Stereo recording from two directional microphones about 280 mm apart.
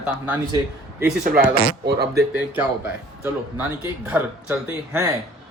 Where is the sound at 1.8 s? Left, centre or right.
Right.